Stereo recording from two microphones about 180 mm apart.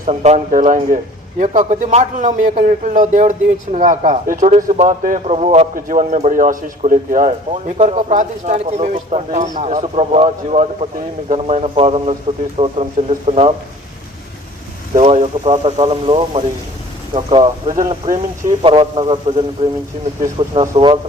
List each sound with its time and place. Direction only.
0.0 s a man's voice: 40° right (ahead or behind)
14.9 s a man's voice: 40° right (ahead or behind)
18.0 s a man's voice: 45° right (ahead or behind)
18.6 s a man's voice: 30° right (ahead or behind)
20.5 s speech: 30° right (ahead or behind)